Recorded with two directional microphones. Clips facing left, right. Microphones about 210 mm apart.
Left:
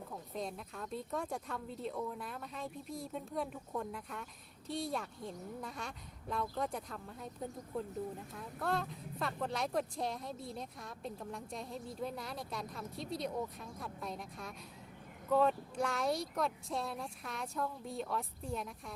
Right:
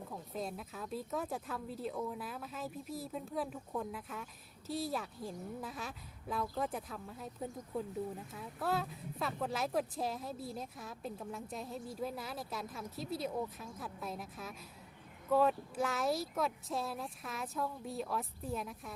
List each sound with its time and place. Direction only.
0.1 s speech: 5° right (ahead or behind)